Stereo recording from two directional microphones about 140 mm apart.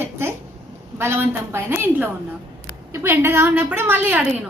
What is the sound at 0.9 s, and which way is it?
A woman's voice, 15° right (ahead or behind).